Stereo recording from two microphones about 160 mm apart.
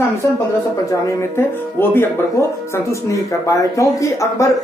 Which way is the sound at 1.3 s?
15° left (ahead or behind).